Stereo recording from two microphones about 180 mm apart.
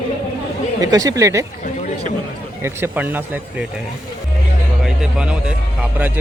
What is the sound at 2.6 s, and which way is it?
Speech, 15° right (ahead or behind).